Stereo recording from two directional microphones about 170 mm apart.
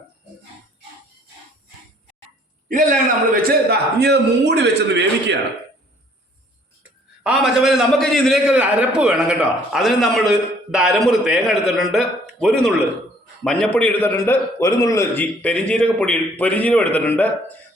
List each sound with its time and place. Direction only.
2.6 s a man's voice: 50° right (ahead or behind); by 5.4 s 90° right
7.3 s a man's voice: 5° right (ahead or behind)